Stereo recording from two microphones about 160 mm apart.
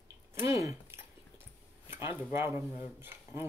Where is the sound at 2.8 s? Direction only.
15° right (ahead or behind).